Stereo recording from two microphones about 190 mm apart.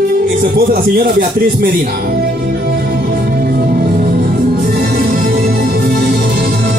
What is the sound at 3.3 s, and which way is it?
Music, 55° right (ahead or behind).